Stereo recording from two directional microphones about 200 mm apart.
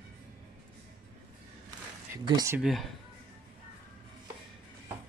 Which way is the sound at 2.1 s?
15° right (ahead or behind).